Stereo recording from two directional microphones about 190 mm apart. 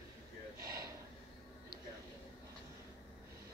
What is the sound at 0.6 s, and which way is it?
Gasp, 20° right (ahead or behind).